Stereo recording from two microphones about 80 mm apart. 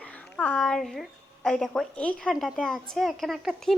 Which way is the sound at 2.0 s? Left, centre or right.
Centre.